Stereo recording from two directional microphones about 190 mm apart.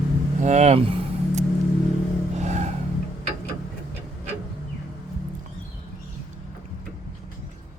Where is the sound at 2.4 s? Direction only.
35° right (ahead or behind).